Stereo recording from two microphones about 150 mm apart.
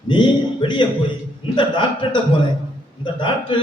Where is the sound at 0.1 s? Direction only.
30° left (ahead or behind).